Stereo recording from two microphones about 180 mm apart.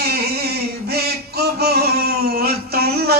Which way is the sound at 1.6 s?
60° right (ahead or behind).